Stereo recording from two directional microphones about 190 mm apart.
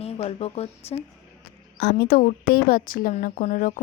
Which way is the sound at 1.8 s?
55° left (ahead or behind).